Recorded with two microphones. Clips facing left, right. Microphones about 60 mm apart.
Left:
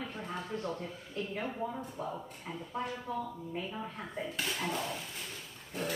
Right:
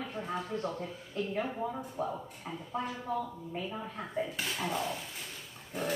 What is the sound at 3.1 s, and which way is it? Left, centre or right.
Speech, right.